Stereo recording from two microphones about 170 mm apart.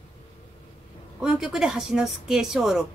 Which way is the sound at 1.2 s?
5° right (ahead or behind).